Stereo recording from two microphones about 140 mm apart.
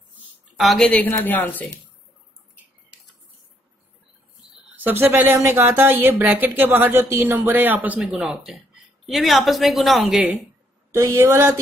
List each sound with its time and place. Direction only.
0.6 s a woman's voice: centre (ahead or behind)
4.7 s a woman's voice: 15° right (ahead or behind)
10.9 s a man's voice: 20° right (ahead or behind)